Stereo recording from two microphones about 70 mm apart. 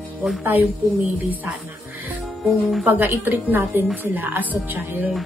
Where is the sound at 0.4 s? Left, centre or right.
Right.